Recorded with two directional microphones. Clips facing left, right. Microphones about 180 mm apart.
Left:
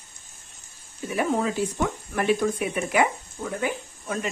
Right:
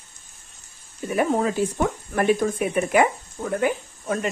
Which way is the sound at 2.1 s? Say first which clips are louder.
Right 2 dB; 50° right (ahead or behind).